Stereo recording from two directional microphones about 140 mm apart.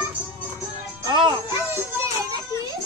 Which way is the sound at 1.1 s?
30° right (ahead or behind).